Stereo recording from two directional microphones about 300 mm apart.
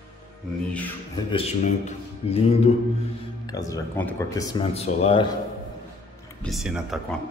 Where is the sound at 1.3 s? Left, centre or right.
Centre.